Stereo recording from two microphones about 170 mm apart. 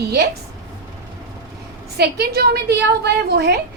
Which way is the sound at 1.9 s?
70° right (ahead or behind).